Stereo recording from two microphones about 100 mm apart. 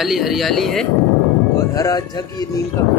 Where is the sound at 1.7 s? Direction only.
35° left (ahead or behind).